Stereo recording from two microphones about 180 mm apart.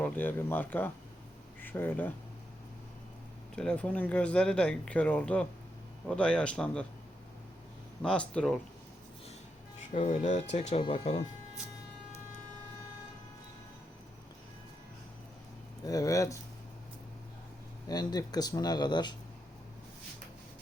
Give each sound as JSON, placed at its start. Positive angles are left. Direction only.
{"t": 0.0, "sound": "speech", "side_deg": 10}
{"t": 3.5, "sound": "speech", "side_deg": 5}
{"t": 8.0, "sound": "speech", "side_deg": 5}
{"t": 9.9, "sound": "speech", "side_deg": 40}
{"t": 15.8, "sound": "speech", "side_deg": 20}
{"t": 17.8, "sound": "speech", "side_deg": 20}